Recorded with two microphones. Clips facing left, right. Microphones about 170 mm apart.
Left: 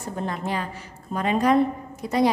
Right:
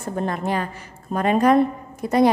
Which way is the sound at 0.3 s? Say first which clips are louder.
Right 4 dB; 55° right (ahead or behind).